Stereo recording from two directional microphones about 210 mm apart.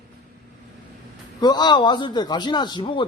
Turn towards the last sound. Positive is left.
turn(degrees=25)  # may be behind; listen again after turning